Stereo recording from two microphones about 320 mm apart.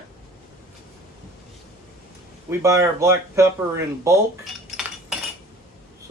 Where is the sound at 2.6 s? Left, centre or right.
Centre.